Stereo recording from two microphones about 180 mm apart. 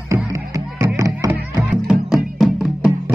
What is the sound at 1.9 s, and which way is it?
Music, 5° right (ahead or behind).